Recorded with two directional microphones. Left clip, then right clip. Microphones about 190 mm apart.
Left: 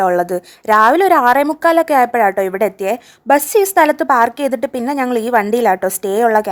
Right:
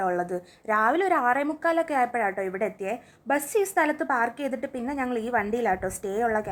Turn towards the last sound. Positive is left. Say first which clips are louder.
# left 13 dB
turn(degrees=50)  # may be behind; listen again after turning